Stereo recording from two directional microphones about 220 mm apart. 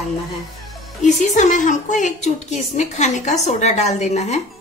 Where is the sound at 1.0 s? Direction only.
30° left (ahead or behind).